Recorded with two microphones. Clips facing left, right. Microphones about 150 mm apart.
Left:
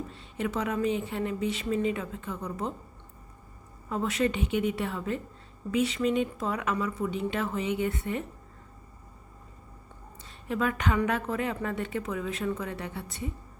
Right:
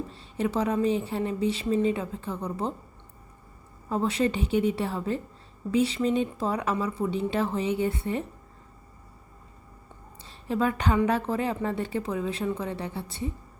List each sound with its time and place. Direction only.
0.1 s speech: 30° right (ahead or behind)
3.8 s speech: 30° right (ahead or behind)
10.2 s a woman's voice: 30° right (ahead or behind)